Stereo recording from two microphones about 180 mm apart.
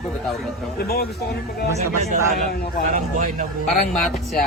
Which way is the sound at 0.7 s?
60° left (ahead or behind).